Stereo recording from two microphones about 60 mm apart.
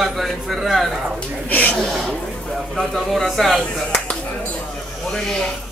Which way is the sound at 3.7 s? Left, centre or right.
Centre.